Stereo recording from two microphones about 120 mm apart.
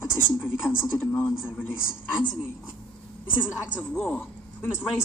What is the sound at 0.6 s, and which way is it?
A woman's voice, 20° left (ahead or behind).